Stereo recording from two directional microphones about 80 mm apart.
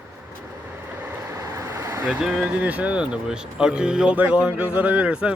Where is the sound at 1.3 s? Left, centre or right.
Right.